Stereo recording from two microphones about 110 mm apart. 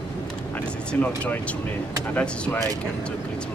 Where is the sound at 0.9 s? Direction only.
15° left (ahead or behind).